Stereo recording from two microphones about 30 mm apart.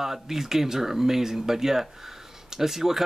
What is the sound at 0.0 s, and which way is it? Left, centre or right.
A man's voice, centre.